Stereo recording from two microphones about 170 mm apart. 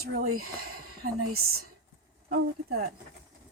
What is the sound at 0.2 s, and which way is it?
Speech, 60° right (ahead or behind).